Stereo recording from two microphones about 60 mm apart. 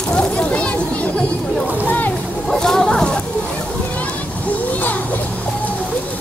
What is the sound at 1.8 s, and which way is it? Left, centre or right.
Music, left.